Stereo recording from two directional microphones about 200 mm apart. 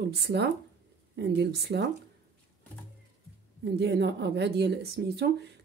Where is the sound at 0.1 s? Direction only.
55° right (ahead or behind).